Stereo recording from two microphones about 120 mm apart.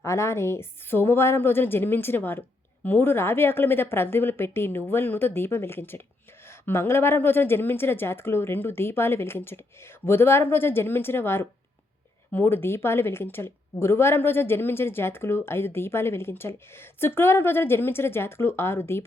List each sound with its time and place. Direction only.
0.0 s a woman's voice: 25° left (ahead or behind)